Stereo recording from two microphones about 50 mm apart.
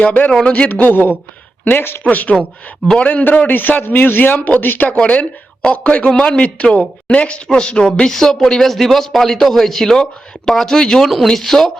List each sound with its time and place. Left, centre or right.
0.0 s a man's voice: left
4.9 s speech: left; by 11.7 s centre